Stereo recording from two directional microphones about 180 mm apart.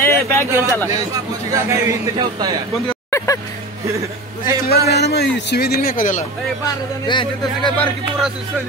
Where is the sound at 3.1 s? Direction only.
15° left (ahead or behind).